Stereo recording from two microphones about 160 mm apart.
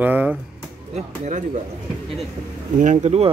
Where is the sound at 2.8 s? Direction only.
45° right (ahead or behind).